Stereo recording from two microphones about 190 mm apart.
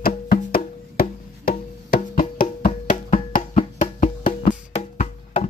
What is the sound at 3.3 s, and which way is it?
Music, 40° left (ahead or behind).